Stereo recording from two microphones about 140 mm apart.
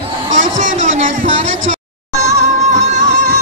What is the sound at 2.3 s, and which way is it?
Music, 55° right (ahead or behind).